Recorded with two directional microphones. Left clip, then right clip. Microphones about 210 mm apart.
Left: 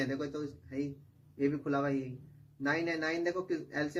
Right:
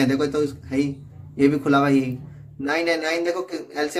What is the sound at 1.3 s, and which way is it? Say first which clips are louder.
Speech: right 14 dB; 40° right (ahead or behind).